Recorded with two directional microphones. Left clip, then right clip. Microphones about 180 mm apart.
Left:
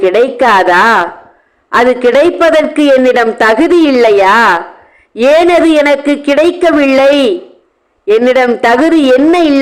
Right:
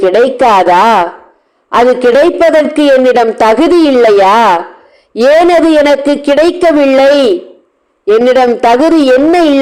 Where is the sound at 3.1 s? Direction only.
10° left (ahead or behind).